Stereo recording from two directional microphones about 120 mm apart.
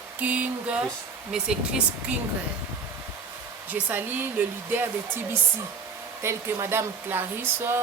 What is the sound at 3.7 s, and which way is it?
Speech, 15° right (ahead or behind).